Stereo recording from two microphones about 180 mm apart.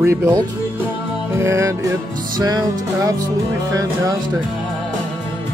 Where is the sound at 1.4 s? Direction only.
15° right (ahead or behind).